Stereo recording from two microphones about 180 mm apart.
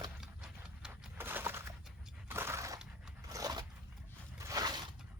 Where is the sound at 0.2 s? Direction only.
5° right (ahead or behind).